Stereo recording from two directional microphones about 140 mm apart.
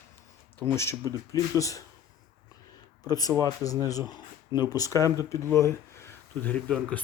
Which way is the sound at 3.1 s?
25° left (ahead or behind).